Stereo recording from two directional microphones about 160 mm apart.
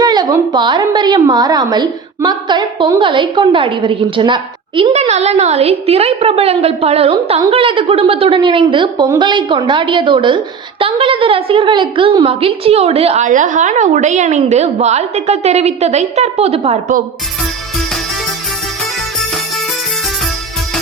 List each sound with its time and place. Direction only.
0.0 s a woman's voice: 25° right (ahead or behind)